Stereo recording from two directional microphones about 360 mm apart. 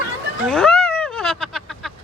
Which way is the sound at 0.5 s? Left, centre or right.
Centre.